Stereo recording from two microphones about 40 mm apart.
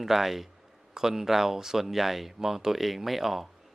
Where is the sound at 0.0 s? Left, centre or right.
Centre.